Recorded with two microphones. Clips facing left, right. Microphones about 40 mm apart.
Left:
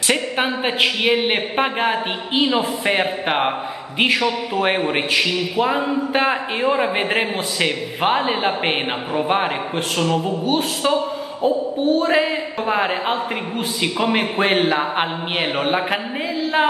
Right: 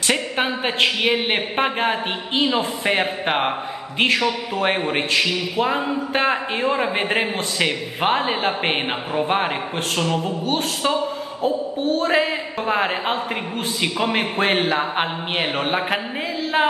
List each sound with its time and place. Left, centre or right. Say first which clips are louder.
0.1 s a man's voice: left 2 dB; centre